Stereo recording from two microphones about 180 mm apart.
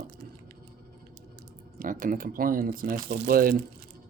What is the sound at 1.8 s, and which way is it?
Speech, 50° right (ahead or behind).